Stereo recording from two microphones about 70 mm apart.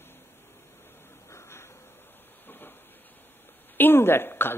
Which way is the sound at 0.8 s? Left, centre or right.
Left.